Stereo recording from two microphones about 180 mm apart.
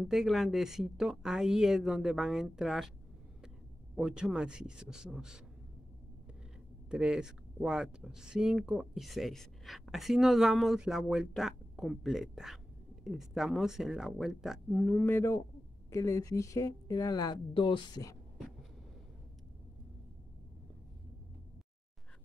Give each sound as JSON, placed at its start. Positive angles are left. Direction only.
{"t": 0.1, "sound": "speech", "side_deg": 0}
{"t": 3.9, "sound": "speech", "side_deg": -5}
{"t": 6.9, "sound": "a woman's voice", "side_deg": -5}